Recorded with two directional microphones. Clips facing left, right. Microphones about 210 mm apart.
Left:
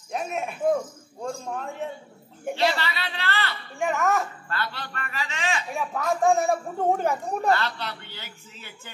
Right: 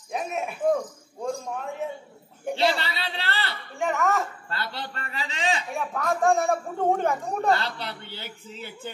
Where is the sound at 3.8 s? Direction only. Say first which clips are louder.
Left 1 dB; centre (ahead or behind).